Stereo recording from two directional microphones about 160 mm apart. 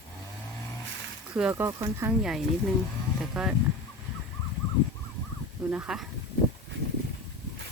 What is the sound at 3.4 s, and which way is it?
Speech, centre (ahead or behind).